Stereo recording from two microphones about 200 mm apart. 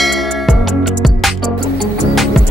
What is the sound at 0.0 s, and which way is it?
Music, centre (ahead or behind).